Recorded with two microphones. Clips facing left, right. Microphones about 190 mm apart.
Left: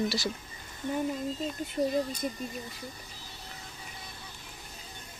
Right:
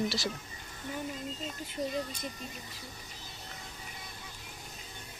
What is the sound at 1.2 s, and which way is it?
Speech, 35° left (ahead or behind).